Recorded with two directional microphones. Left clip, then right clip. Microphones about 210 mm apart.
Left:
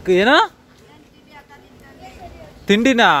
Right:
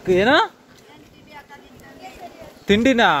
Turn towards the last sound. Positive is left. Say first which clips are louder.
# left 2 dB
turn(degrees=25)  # may be behind; listen again after turning